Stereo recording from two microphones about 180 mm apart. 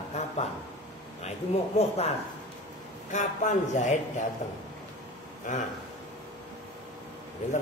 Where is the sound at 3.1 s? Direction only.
40° left (ahead or behind).